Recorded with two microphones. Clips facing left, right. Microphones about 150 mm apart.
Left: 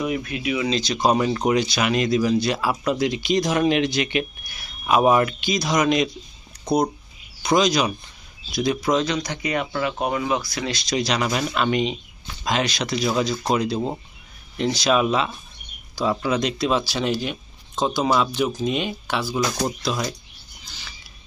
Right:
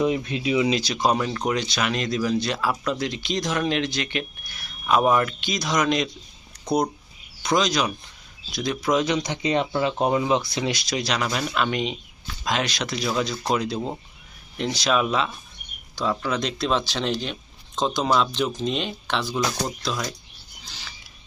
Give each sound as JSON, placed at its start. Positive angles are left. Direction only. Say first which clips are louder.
{"t": 0.0, "sound": "speech", "louder": "right 2 dB", "side_deg": -25}
{"t": 0.7, "sound": "speech", "louder": "left 2 dB", "side_deg": -5}
{"t": 7.4, "sound": "speech", "louder": "left 3 dB", "side_deg": 5}
{"t": 9.0, "sound": "speech", "louder": "right 2 dB", "side_deg": -20}
{"t": 10.8, "sound": "speech", "louder": "left 3 dB", "side_deg": 0}